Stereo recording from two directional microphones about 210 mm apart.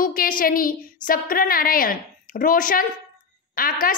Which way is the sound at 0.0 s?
40° left (ahead or behind).